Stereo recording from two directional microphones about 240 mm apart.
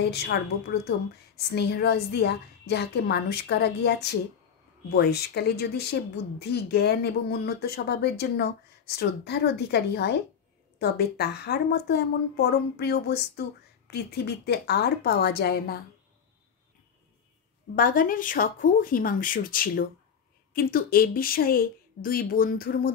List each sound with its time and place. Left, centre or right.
0.3 s a woman's voice: left
1.5 s a woman's voice: left
17.7 s a woman's voice: left